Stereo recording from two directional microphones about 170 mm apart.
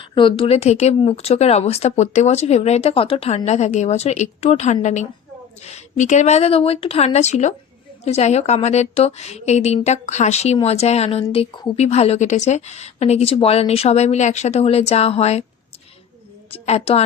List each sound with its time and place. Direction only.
0.0 s speech: 30° left (ahead or behind)
16.5 s a woman's voice: 35° left (ahead or behind)